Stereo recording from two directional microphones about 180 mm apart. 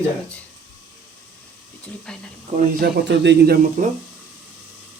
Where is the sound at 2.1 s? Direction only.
5° left (ahead or behind).